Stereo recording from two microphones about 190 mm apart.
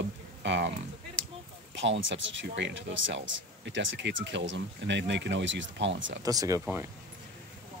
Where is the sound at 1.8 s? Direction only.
80° right.